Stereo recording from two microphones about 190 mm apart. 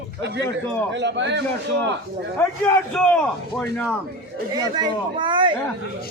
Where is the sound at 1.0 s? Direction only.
65° right (ahead or behind).